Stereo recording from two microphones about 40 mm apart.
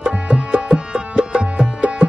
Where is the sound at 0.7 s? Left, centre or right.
Right.